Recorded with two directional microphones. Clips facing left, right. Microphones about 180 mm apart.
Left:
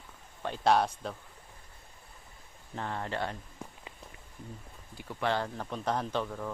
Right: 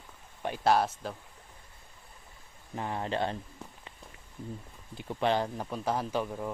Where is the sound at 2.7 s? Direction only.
15° right (ahead or behind).